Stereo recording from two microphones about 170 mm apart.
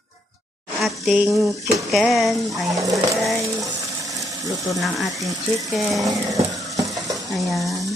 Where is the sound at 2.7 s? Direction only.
20° right (ahead or behind).